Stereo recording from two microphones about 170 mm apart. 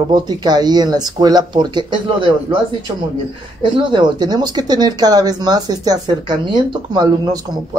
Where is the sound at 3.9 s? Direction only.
25° right (ahead or behind).